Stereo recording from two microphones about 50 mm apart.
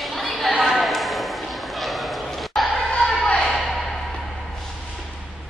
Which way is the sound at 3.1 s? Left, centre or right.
Left.